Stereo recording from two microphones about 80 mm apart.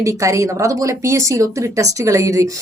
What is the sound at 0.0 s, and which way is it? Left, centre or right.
Speech, right.